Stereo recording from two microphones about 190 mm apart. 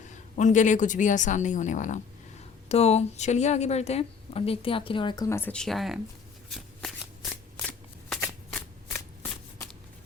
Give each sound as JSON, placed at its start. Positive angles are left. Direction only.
{"t": 0.1, "sound": "a woman's voice", "side_deg": 40}
{"t": 6.5, "sound": "shuffling cards", "side_deg": 0}